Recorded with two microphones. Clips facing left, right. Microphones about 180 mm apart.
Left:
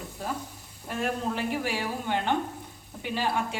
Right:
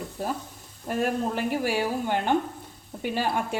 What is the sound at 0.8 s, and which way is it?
A woman's voice, 50° right (ahead or behind).